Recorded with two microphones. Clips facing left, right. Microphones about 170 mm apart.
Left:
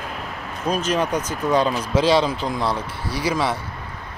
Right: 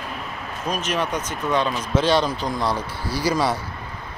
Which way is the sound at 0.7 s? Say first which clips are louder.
Left 4 dB; 30° left (ahead or behind).